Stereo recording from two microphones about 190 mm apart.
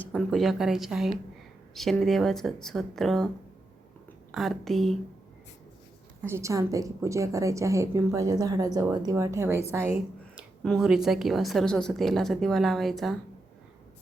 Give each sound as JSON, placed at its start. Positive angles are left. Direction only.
{"t": 0.1, "sound": "a woman's voice", "side_deg": 0}
{"t": 4.3, "sound": "a woman's voice", "side_deg": 0}
{"t": 6.2, "sound": "a woman's voice", "side_deg": -15}
{"t": 10.6, "sound": "a woman's voice", "side_deg": 0}